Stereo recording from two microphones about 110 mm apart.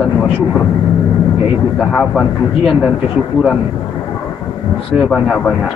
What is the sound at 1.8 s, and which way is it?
Speech, centre (ahead or behind).